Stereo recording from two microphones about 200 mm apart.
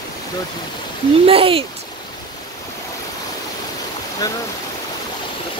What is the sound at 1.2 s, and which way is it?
Speech, 30° right (ahead or behind).